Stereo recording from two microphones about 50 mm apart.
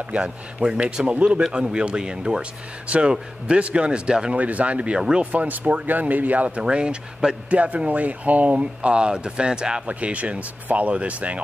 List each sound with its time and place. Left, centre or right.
0.1 s speech: centre
6.6 s speech: centre
9.8 s speech: right